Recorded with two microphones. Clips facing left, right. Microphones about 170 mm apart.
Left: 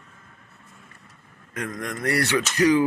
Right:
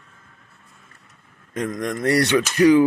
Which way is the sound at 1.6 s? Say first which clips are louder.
Right 6 dB; 20° right (ahead or behind).